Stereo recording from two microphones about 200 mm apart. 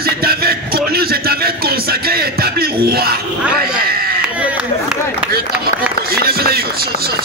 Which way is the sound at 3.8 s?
50° right (ahead or behind).